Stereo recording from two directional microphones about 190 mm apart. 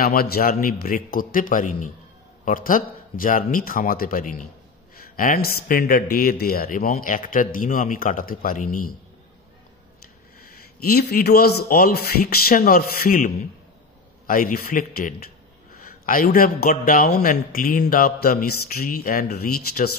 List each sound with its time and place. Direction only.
0.0 s a man's voice: 50° left (ahead or behind)
10.4 s a man's voice: 50° left (ahead or behind)